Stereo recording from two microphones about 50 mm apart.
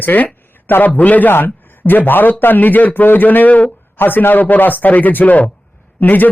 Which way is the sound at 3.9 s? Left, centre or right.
Left.